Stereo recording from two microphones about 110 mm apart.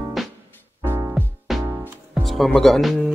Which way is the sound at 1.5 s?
Centre (ahead or behind).